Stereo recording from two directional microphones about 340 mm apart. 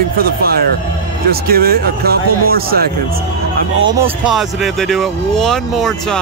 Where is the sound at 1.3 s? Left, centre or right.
Right.